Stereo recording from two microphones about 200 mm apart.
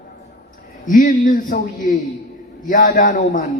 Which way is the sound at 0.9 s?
40° left (ahead or behind).